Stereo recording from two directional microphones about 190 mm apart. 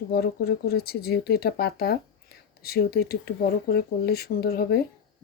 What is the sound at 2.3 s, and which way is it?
Whispering, 55° left (ahead or behind).